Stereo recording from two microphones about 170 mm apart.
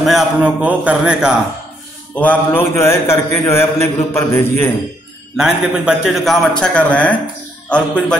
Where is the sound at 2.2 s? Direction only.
10° left (ahead or behind).